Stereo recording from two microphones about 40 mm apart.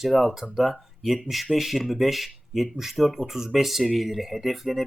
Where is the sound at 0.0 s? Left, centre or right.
Centre.